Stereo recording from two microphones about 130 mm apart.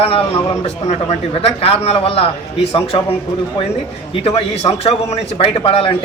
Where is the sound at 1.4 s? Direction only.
50° left (ahead or behind).